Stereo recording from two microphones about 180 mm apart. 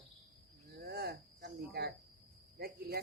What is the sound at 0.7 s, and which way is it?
Speech, 60° right (ahead or behind).